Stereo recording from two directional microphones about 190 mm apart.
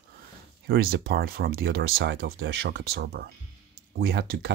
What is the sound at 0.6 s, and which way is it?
Speech, 50° right (ahead or behind).